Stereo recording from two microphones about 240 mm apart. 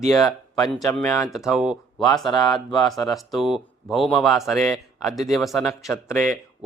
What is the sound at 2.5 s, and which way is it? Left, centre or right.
Speech, centre.